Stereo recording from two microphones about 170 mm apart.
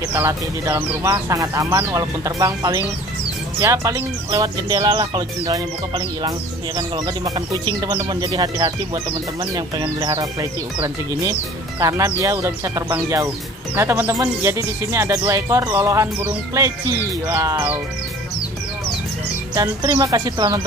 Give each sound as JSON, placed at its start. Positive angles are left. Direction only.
{"t": 0.1, "sound": "speech", "side_deg": -15}
{"t": 19.5, "sound": "speech", "side_deg": -25}